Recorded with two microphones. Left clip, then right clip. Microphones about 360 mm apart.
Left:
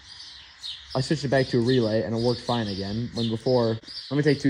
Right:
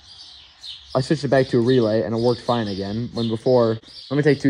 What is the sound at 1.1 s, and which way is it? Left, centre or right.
Speech, right.